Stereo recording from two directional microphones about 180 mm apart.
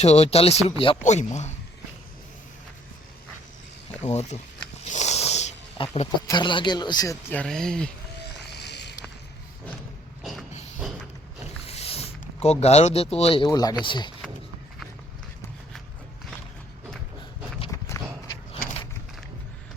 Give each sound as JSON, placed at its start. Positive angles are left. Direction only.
{"t": 0.0, "sound": "speech", "side_deg": 35}
{"t": 4.0, "sound": "speech", "side_deg": 40}
{"t": 4.8, "sound": "snake", "side_deg": 40}
{"t": 6.2, "sound": "speech", "side_deg": 25}
{"t": 8.5, "sound": "a sound", "side_deg": 70}
{"t": 11.6, "sound": "a sound", "side_deg": 35}
{"t": 13.5, "sound": "speech", "side_deg": 20}
{"t": 17.7, "sound": "walk", "side_deg": 15}